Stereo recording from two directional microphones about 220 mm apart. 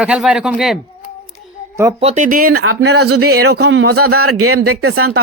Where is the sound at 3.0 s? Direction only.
85° right.